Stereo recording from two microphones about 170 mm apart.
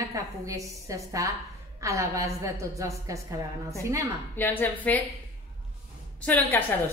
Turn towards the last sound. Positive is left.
turn(degrees=10)  # may be behind; listen again after turning